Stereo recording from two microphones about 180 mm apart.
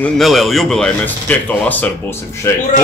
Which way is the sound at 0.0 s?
Centre (ahead or behind).